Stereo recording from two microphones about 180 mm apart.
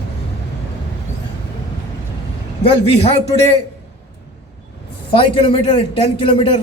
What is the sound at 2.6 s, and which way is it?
Speech, 35° left (ahead or behind).